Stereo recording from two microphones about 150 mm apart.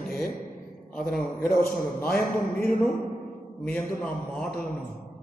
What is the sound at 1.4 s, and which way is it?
A man's voice, 75° left (ahead or behind).